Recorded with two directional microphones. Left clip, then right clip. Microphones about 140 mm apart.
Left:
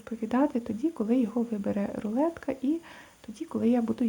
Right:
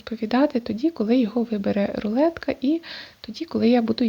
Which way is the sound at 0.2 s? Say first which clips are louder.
Right 6 dB; 30° right (ahead or behind).